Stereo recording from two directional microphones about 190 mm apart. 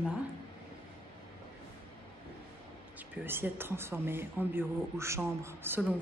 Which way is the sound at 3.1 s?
10° right (ahead or behind).